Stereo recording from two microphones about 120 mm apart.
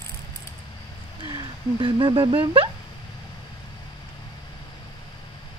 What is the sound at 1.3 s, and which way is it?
Speech, 45° right (ahead or behind).